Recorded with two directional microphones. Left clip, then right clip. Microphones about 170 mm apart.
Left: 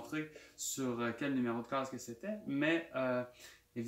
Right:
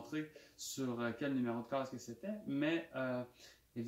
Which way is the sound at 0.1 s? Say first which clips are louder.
Left 1 dB; 5° left (ahead or behind).